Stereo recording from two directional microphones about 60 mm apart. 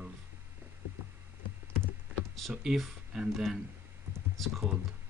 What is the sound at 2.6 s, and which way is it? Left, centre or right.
Speech, centre.